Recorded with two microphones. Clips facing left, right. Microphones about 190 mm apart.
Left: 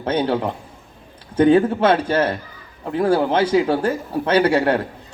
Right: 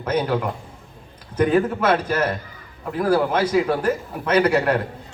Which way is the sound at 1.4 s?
30° left (ahead or behind).